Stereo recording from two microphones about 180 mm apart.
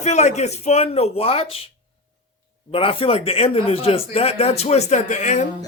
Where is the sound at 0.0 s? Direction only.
40° left (ahead or behind).